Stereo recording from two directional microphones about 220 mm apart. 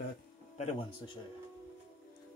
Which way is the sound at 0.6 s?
25° left (ahead or behind).